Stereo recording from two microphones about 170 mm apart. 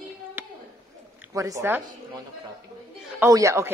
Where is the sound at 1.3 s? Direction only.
20° right (ahead or behind).